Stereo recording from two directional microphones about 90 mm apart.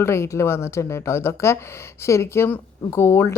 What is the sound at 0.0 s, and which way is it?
Speech, 30° left (ahead or behind).